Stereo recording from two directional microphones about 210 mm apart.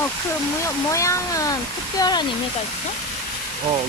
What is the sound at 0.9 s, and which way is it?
Speech, 15° left (ahead or behind).